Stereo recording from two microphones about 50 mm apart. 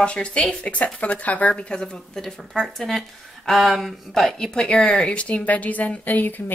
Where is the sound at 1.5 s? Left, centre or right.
Centre.